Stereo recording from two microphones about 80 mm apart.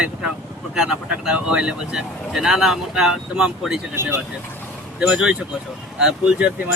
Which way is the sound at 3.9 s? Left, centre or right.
Right.